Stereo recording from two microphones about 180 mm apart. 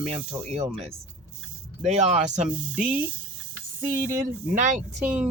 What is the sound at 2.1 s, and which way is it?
Speech, 40° right (ahead or behind).